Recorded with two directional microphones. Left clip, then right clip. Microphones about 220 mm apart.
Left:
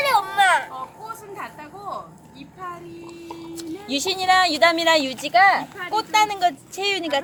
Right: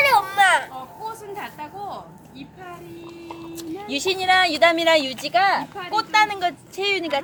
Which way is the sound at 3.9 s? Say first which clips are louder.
Even; 25° left (ahead or behind).